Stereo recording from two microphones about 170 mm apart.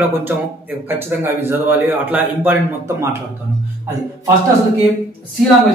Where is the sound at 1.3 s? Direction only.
15° right (ahead or behind).